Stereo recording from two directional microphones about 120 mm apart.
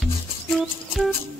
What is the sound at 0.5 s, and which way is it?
Music, centre (ahead or behind).